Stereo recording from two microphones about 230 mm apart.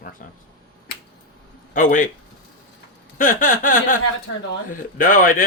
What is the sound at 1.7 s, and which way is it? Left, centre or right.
Speech, left.